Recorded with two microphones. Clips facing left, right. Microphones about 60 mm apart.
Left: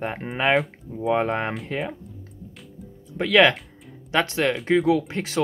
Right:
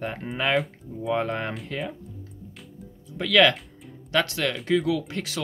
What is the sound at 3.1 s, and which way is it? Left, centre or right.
Speech, left.